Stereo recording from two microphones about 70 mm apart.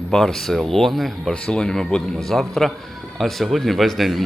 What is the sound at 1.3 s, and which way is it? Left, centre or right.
A man's voice, centre.